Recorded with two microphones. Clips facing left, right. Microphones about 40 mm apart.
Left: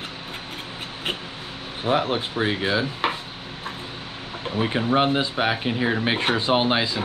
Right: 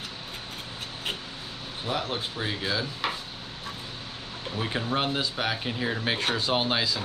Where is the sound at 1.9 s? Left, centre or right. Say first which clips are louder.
Left 8 dB; left.